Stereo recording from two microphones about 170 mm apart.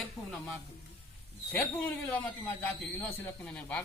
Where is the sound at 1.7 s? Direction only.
10° left (ahead or behind).